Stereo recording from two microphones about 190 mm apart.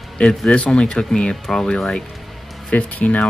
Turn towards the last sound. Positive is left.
turn(degrees=5)  # may be behind; listen again after turning